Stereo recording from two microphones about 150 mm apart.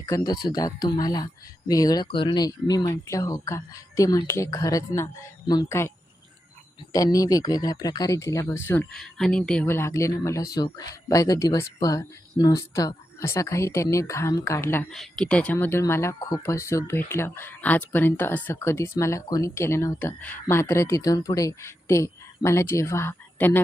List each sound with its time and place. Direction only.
0.0 s speech: 25° left (ahead or behind)
6.9 s speech: 25° left (ahead or behind)
8.9 s speech: centre (ahead or behind)
9.6 s speech: 15° left (ahead or behind)
14.8 s speech: 5° left (ahead or behind)